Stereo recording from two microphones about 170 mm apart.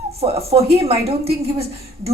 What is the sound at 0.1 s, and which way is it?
A woman's voice, 35° right (ahead or behind).